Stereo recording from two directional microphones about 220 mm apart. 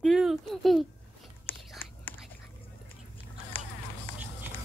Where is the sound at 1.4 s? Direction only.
10° left (ahead or behind).